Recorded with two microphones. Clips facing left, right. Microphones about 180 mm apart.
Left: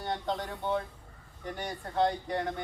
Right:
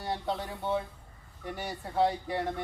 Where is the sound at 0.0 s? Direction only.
5° right (ahead or behind).